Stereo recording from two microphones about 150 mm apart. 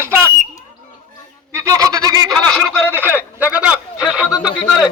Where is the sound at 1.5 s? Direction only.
20° right (ahead or behind).